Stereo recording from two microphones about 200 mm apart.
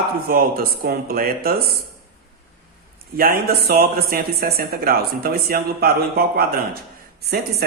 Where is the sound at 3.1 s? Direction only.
45° right (ahead or behind).